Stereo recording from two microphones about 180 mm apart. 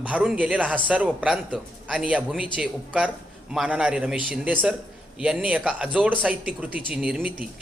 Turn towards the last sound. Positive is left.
turn(degrees=-5)  # may be behind; listen again after turning